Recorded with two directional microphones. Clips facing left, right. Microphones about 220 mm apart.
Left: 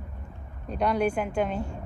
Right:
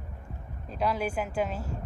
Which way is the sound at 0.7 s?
Centre (ahead or behind).